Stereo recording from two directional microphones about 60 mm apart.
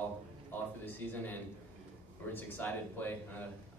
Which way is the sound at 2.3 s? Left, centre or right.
Left.